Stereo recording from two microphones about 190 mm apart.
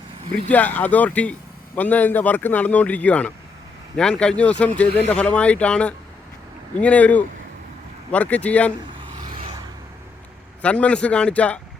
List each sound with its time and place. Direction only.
0.4 s a man's voice: 10° left (ahead or behind)
10.6 s a man's voice: 5° left (ahead or behind)